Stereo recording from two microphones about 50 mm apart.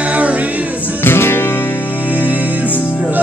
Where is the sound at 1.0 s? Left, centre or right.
Left.